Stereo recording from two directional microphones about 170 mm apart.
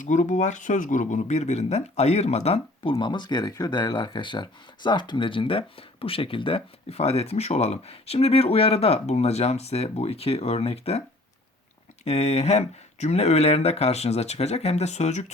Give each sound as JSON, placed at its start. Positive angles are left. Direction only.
{"t": 0.0, "sound": "speech", "side_deg": 45}
{"t": 12.0, "sound": "speech", "side_deg": 40}